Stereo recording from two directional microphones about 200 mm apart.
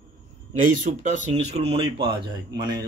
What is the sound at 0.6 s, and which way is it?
Speech, 40° right (ahead or behind).